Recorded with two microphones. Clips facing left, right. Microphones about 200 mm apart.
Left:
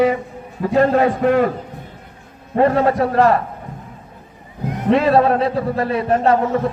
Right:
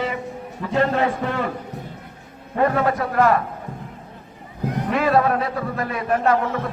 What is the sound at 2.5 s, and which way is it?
Speech, 30° left (ahead or behind).